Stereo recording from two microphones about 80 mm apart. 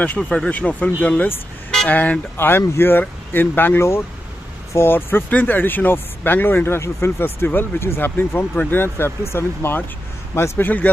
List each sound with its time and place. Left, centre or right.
0.0 s a man's voice: centre